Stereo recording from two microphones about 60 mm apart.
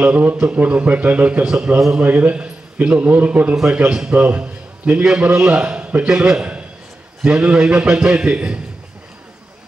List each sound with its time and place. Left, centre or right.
0.0 s a man's voice: right